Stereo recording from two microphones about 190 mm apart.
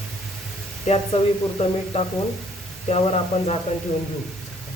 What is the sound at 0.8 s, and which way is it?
Speech, 35° left (ahead or behind).